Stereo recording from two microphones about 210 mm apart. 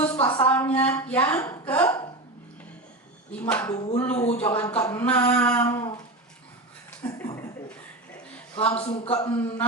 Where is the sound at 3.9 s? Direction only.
35° left (ahead or behind).